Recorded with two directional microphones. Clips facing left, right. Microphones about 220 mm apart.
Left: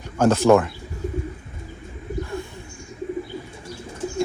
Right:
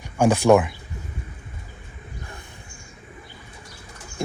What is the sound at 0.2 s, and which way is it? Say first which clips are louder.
Speech: left 1 dB; 15° right (ahead or behind).